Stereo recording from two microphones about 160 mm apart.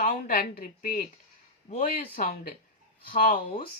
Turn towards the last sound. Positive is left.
turn(degrees=55)  # may be behind; listen again after turning